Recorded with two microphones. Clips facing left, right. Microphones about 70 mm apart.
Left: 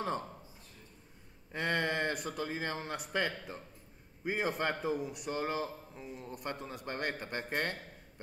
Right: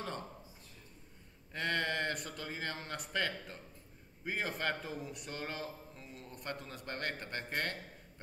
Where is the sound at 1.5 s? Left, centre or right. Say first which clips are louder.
Left 3 dB; centre.